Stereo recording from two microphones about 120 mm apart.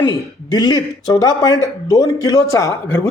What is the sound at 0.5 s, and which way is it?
A man's voice, 35° left (ahead or behind).